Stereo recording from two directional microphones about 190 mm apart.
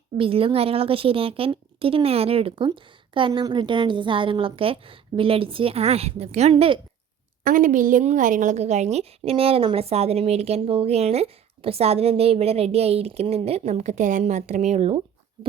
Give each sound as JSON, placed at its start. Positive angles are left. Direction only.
{"t": 0.2, "sound": "speech", "side_deg": -30}
{"t": 7.4, "sound": "a woman's voice", "side_deg": -45}